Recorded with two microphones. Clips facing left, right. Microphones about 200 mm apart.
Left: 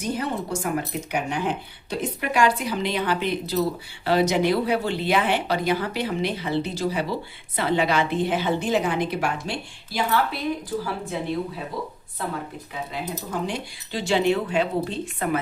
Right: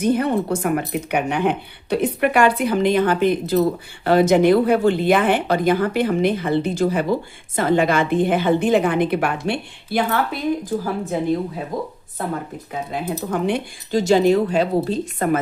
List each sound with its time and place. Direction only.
0.0 s speech: 60° right (ahead or behind)
10.8 s speech: 45° right (ahead or behind)
12.9 s speech: 55° right (ahead or behind)
13.9 s a woman's voice: 40° right (ahead or behind)